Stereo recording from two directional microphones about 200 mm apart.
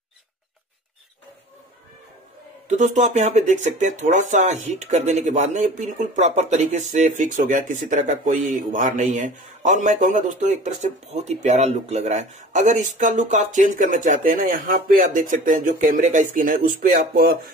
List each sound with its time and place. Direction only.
2.7 s speech: 35° right (ahead or behind)